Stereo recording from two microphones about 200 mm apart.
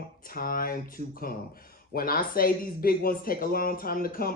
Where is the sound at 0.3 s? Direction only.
45° left (ahead or behind).